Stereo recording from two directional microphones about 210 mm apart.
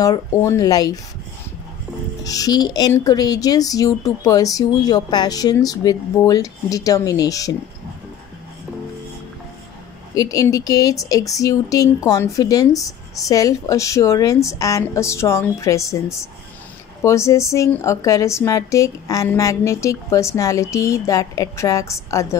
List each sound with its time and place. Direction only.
0.0 s speech: 15° left (ahead or behind)
2.2 s speech: 15° left (ahead or behind)
10.1 s speech: 15° left (ahead or behind)